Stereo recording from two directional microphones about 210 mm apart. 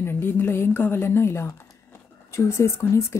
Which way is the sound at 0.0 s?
10° left (ahead or behind).